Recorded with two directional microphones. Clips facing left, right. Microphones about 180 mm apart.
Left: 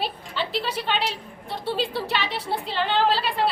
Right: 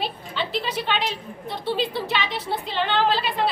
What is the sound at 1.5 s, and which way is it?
Speech, 5° left (ahead or behind).